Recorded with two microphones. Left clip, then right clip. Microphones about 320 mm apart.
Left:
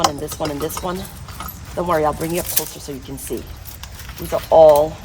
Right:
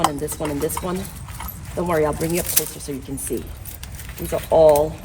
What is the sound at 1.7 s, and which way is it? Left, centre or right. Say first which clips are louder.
Speech: left 2 dB; centre.